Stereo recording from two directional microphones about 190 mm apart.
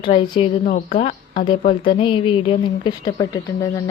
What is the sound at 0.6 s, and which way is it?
Speech, 40° left (ahead or behind).